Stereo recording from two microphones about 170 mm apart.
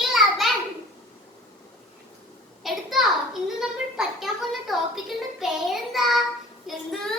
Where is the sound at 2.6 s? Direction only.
Centre (ahead or behind).